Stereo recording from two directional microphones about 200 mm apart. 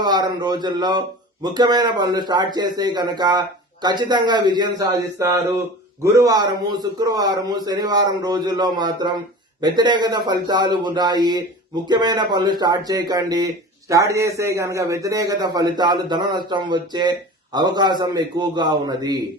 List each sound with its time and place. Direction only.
0.0 s a man's voice: 20° right (ahead or behind)